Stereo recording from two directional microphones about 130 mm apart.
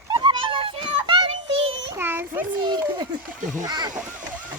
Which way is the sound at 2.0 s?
15° right (ahead or behind).